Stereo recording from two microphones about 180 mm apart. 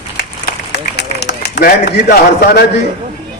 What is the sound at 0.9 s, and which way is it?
A man's voice, 65° left (ahead or behind).